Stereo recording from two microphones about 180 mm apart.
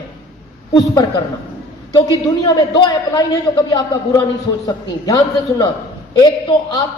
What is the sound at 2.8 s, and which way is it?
A man's voice, 25° left (ahead or behind).